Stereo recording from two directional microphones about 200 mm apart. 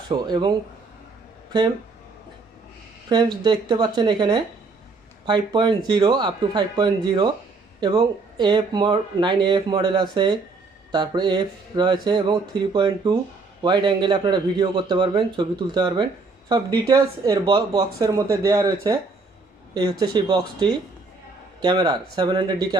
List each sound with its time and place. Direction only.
0.1 s speech: 20° right (ahead or behind)
3.1 s speech: 20° right (ahead or behind)